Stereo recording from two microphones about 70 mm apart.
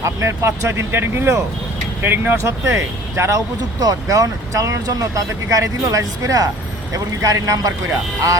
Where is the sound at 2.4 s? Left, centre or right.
Right.